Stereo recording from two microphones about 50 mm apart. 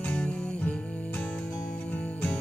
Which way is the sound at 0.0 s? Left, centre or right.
Left.